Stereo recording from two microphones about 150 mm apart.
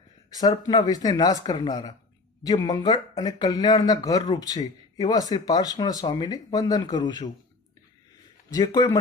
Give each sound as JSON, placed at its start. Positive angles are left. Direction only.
{"t": 0.3, "sound": "speech", "side_deg": 25}
{"t": 8.4, "sound": "speech", "side_deg": 25}